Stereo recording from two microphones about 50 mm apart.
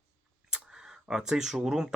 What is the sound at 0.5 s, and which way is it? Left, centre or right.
Speech, centre.